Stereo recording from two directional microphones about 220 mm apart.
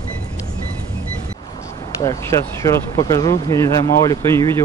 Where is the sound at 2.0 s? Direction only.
15° left (ahead or behind).